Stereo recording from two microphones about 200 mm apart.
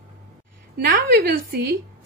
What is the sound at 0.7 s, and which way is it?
Speech, 55° right (ahead or behind).